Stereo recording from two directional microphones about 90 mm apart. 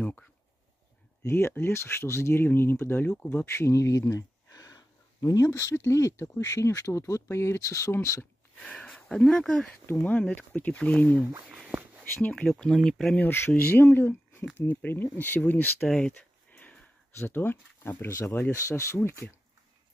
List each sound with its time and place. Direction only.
0.0 s speech: 20° left (ahead or behind)
8.5 s speech: 10° left (ahead or behind)
9.8 s speech: 20° left (ahead or behind)
12.4 s speech: 5° left (ahead or behind)
13.2 s speech: 25° left (ahead or behind)
15.9 s a sound: 15° left (ahead or behind)
17.2 s speech: 25° left (ahead or behind)